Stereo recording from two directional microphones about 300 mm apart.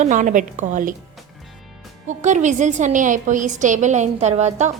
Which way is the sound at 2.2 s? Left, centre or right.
Right.